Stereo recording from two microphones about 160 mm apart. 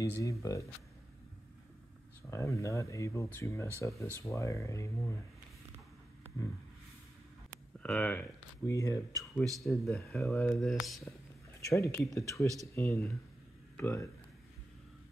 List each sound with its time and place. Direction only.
0.0 s speech: 20° left (ahead or behind)
2.3 s speech: 20° left (ahead or behind)
7.8 s speech: 10° left (ahead or behind)
8.6 s speech: 20° left (ahead or behind)
9.3 s speech: centre (ahead or behind)
11.6 s speech: 20° left (ahead or behind)